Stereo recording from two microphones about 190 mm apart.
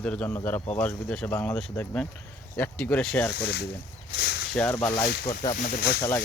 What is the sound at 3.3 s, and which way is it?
Speech, 60° left (ahead or behind).